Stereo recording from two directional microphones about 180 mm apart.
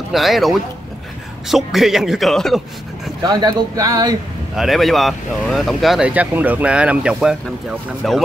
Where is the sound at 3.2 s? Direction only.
20° right (ahead or behind).